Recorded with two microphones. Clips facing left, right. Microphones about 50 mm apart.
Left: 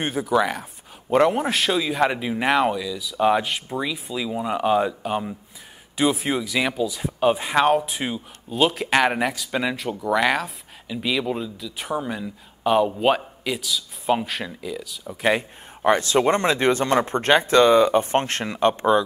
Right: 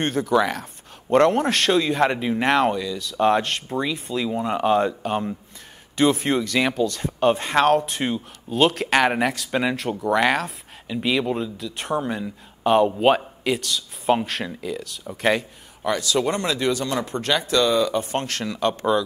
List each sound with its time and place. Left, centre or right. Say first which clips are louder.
0.0 s a man's voice: right 1 dB; centre
15.8 s speech: left 4 dB; left